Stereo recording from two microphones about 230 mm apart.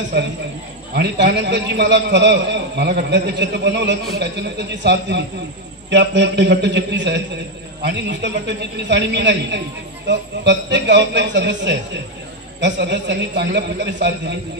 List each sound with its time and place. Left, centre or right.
0.9 s a man's voice: right